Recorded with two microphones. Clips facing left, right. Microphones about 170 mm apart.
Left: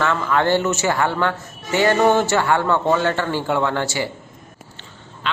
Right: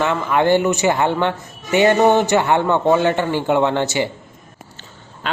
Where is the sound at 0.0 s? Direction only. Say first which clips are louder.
Right 2 dB; 15° right (ahead or behind).